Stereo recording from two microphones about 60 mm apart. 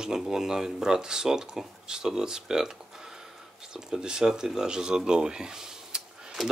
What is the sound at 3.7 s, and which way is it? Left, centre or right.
Speech, centre.